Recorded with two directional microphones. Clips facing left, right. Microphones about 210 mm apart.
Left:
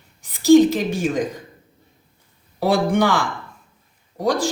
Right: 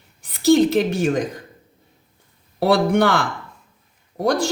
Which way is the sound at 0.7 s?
60° right (ahead or behind).